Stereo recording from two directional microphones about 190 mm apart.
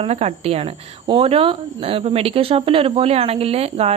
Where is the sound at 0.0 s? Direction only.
30° right (ahead or behind).